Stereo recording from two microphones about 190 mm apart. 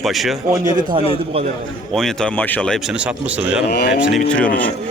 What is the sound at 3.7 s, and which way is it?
Speech, 55° left (ahead or behind).